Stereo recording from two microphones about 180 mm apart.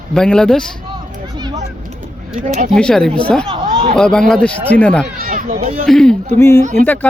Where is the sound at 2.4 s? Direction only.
45° right (ahead or behind).